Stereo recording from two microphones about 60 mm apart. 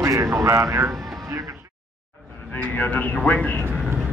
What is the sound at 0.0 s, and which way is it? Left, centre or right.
Speech, right.